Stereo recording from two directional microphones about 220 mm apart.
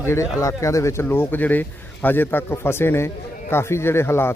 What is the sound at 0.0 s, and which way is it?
Speech, 15° left (ahead or behind).